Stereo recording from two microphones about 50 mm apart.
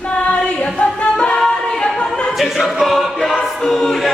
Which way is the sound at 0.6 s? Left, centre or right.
Left.